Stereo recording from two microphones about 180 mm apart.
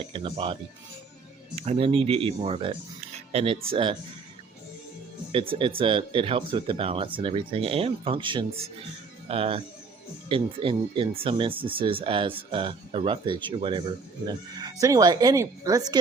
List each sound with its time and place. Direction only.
0.0 s speech: 30° right (ahead or behind)
5.3 s speech: 30° right (ahead or behind)